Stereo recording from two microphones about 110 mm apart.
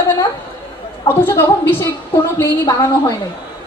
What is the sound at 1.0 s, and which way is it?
Speech, 20° left (ahead or behind).